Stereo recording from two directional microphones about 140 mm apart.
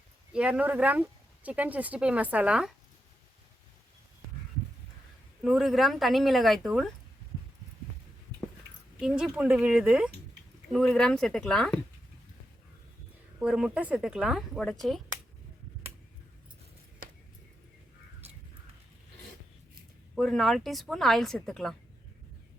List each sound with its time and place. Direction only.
0.3 s speech: 5° right (ahead or behind)
5.4 s speech: 5° right (ahead or behind)
9.0 s speech: 5° right (ahead or behind)
13.4 s speech: 5° right (ahead or behind)
17.0 s a sound: 90° right
20.1 s speech: 5° left (ahead or behind)